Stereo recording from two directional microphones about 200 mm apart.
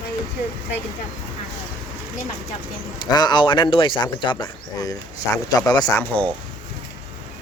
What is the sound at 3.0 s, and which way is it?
Speech, 20° left (ahead or behind).